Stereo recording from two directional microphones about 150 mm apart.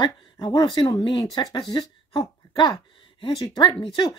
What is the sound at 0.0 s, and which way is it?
Speech, 30° left (ahead or behind).